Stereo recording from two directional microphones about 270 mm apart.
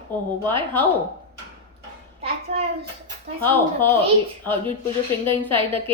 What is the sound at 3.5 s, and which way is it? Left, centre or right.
Speech, centre.